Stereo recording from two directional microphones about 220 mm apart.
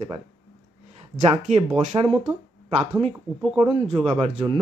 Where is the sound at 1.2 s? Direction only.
30° right (ahead or behind).